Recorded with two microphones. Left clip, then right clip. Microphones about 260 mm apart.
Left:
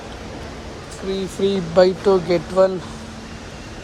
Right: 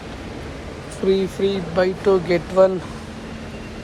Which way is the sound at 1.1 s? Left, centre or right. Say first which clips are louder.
Even; centre.